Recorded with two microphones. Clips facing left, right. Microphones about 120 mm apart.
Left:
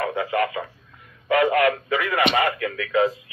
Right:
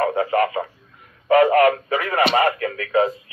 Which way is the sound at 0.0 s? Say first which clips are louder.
Right 4 dB; 40° right (ahead or behind).